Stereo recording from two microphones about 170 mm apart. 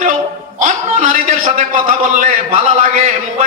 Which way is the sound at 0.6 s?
50° right (ahead or behind).